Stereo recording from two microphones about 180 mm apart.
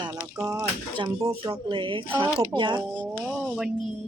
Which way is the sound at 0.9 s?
25° right (ahead or behind).